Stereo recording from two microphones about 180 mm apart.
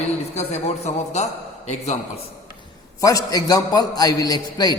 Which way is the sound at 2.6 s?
20° left (ahead or behind).